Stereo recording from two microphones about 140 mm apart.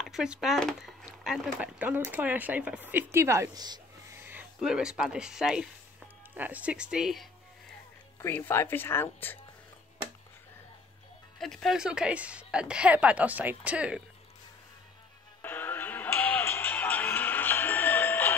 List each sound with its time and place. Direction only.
0.0 s speech: 5° right (ahead or behind); by 3.8 s 30° right (ahead or behind)
4.1 s speech: 15° right (ahead or behind)
8.2 s speech: 15° left (ahead or behind)
11.3 s speech: centre (ahead or behind)
15.4 s music: 15° left (ahead or behind)